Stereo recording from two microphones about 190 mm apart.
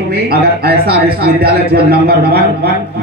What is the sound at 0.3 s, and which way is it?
A man's voice, 55° right (ahead or behind).